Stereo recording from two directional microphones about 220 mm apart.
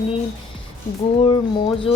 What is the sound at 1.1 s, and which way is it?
Speech, 25° left (ahead or behind).